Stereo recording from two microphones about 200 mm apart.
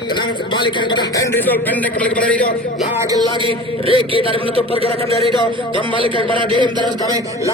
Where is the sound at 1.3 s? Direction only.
10° left (ahead or behind).